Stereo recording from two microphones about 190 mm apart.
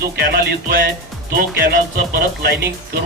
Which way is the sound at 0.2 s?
55° right (ahead or behind).